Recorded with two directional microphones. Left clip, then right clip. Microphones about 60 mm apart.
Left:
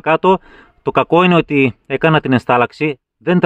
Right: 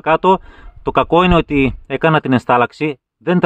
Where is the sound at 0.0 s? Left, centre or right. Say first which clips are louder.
Even; left.